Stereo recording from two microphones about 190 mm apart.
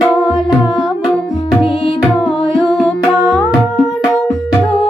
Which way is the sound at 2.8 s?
Centre (ahead or behind).